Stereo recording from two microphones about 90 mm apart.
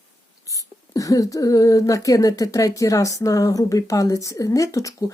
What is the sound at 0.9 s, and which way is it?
Speech, 40° left (ahead or behind).